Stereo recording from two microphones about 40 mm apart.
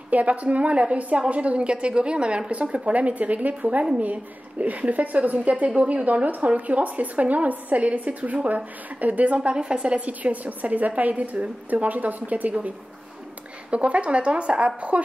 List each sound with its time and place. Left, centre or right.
0.1 s speech: right
9.6 s a woman's voice: right
9.9 s a woman's voice: right
13.7 s speech: right